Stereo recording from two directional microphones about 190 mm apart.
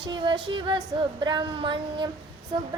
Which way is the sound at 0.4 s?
25° right (ahead or behind).